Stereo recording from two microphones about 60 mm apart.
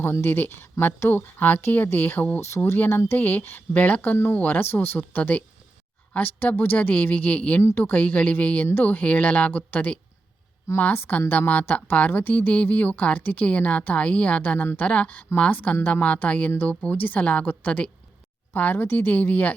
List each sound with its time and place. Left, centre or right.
0.0 s speech: left